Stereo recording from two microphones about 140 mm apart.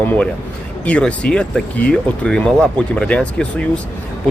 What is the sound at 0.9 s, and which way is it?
A man's voice, 10° left (ahead or behind).